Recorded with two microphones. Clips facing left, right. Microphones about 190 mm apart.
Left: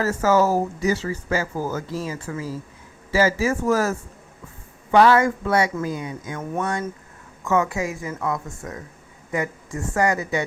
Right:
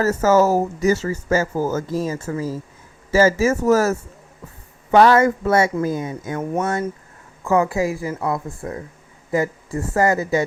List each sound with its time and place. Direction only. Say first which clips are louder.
0.0 s speech: right 3 dB; 40° right (ahead or behind)